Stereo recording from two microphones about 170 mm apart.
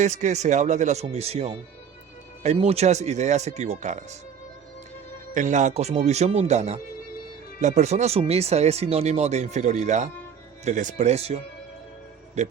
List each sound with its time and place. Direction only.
0.0 s speech: 45° right (ahead or behind)
5.3 s speech: 45° right (ahead or behind)
12.4 s speech: 45° right (ahead or behind)